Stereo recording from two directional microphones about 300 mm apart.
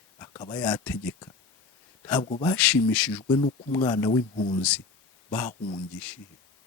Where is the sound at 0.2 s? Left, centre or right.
Centre.